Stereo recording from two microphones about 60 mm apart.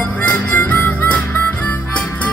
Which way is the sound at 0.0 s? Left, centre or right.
Left.